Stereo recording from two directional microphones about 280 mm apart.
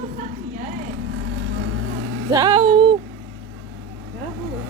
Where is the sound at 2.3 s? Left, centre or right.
Centre.